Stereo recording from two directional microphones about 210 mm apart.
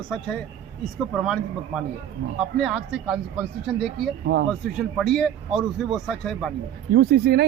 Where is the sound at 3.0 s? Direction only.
5° right (ahead or behind).